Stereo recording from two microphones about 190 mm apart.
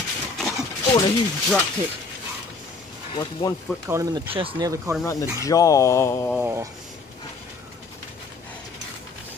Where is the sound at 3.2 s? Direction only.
20° left (ahead or behind).